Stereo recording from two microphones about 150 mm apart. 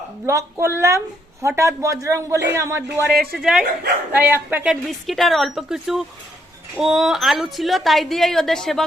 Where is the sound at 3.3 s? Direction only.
Centre (ahead or behind).